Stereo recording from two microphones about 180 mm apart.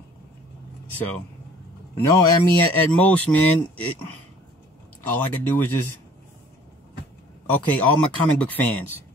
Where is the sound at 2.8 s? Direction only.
10° left (ahead or behind).